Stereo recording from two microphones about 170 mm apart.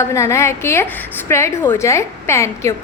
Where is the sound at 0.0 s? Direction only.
15° left (ahead or behind).